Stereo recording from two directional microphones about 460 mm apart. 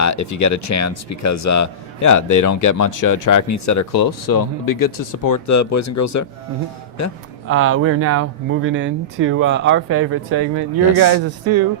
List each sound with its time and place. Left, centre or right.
0.0 s speech: left
7.4 s speech: right